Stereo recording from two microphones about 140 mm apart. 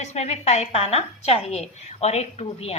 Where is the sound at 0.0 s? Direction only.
50° left (ahead or behind).